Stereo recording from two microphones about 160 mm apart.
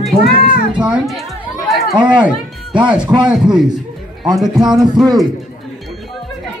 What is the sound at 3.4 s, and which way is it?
Speech, 5° right (ahead or behind).